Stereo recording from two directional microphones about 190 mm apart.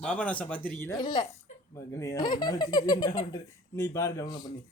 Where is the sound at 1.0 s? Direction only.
25° left (ahead or behind).